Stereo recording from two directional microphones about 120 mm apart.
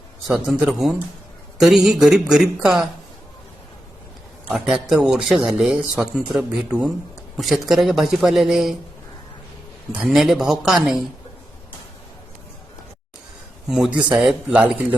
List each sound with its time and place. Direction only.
0.3 s speech: 5° right (ahead or behind)
4.5 s speech: centre (ahead or behind)
9.9 s speech: centre (ahead or behind)
13.7 s speech: 5° right (ahead or behind)